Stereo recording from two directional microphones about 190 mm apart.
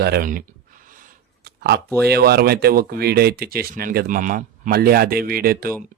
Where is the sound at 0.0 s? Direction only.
50° right (ahead or behind).